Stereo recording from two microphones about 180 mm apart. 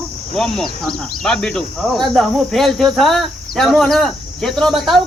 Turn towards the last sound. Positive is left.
turn(degrees=0)  # may be behind; listen again after turning